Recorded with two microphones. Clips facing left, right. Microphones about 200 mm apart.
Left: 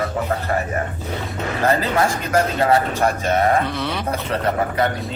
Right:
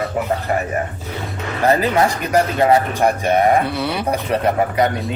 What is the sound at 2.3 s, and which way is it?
Speech, 20° right (ahead or behind).